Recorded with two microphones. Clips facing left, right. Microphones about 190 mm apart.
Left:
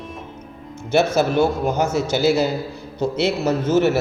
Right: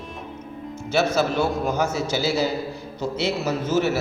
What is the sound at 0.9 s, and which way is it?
A man's voice, 55° left (ahead or behind).